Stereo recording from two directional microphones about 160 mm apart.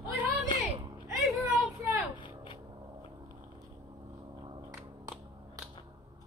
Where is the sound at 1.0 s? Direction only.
20° right (ahead or behind).